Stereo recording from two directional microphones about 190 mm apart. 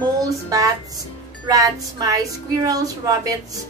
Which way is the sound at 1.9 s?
20° right (ahead or behind).